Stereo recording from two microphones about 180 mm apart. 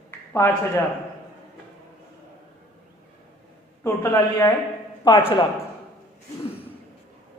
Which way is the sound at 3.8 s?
15° left (ahead or behind).